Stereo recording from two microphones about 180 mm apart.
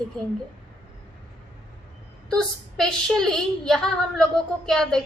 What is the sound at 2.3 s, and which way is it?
A woman's voice, centre (ahead or behind).